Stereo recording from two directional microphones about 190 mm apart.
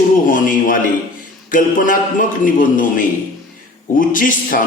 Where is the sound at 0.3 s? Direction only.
45° left (ahead or behind).